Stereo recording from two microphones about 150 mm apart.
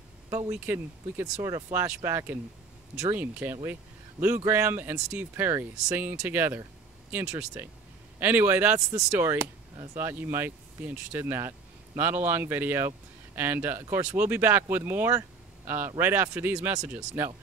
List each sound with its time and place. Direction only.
0.5 s speech: 10° right (ahead or behind)